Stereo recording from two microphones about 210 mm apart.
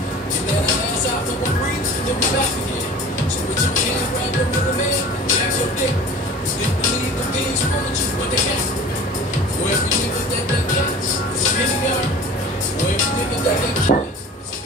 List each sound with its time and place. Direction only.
13.9 s speech: 40° left (ahead or behind)